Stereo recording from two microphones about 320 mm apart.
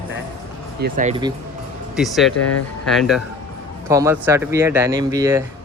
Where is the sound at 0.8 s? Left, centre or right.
Right.